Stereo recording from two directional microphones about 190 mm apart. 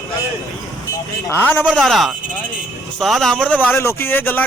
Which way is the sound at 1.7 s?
Centre (ahead or behind).